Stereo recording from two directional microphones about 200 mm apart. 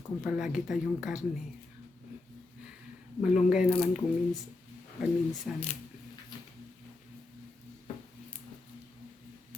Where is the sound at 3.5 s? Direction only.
5° right (ahead or behind).